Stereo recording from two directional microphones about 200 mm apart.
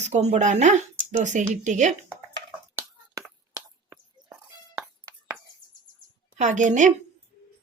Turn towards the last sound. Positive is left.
turn(degrees=-40)  # may be behind; listen again after turning